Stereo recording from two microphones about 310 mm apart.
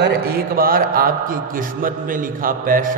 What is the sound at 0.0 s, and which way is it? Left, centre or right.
A man's voice, right.